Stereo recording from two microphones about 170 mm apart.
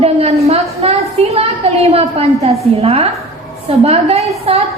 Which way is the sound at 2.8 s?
35° right (ahead or behind).